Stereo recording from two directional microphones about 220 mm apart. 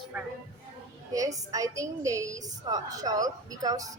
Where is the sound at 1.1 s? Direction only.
15° right (ahead or behind).